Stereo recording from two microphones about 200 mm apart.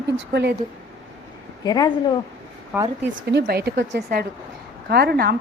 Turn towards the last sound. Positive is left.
turn(degrees=-50)  # may be behind; listen again after turning